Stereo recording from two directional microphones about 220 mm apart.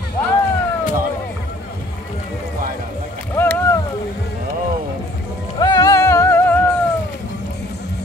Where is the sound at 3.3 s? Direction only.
10° left (ahead or behind).